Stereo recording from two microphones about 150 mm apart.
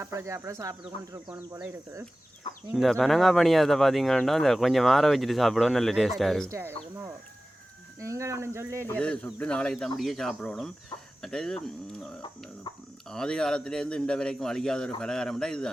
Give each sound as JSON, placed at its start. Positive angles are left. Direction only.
{"t": 0.0, "sound": "speech", "side_deg": -20}
{"t": 2.7, "sound": "speech", "side_deg": 0}
{"t": 6.5, "sound": "speech", "side_deg": -15}
{"t": 8.0, "sound": "speech", "side_deg": -20}
{"t": 8.9, "sound": "speech", "side_deg": 5}